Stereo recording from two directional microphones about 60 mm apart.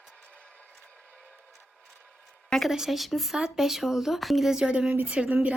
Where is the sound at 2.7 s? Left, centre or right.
Centre; by 5.6 s right.